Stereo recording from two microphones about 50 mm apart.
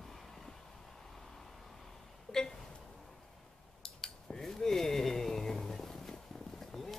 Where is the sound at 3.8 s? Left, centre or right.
Centre.